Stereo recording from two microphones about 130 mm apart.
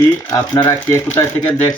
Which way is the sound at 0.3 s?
30° left (ahead or behind).